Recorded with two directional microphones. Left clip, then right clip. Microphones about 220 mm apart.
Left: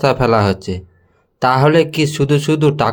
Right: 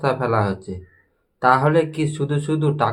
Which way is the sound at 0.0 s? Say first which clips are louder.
Left 7 dB; 40° left (ahead or behind).